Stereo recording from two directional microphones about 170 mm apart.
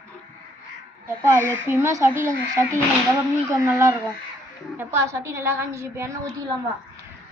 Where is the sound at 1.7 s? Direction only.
15° right (ahead or behind).